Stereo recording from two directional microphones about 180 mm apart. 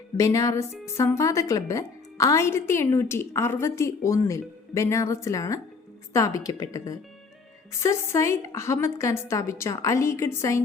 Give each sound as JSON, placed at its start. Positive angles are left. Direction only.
{"t": 0.2, "sound": "a woman's voice", "side_deg": 15}